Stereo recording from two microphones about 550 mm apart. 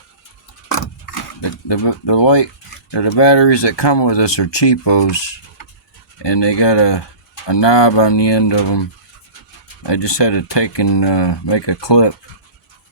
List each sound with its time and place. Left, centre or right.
1.4 s speech: left
9.8 s speech: left